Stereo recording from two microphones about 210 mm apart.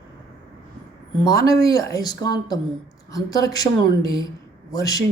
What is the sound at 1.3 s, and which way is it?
A woman's voice, 15° left (ahead or behind).